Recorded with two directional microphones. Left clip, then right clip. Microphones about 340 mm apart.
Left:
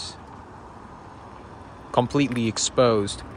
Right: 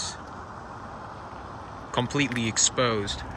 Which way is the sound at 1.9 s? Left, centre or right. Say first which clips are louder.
Left 5 dB; centre.